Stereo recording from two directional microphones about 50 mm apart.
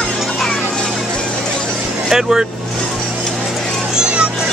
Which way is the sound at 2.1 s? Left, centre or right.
Centre.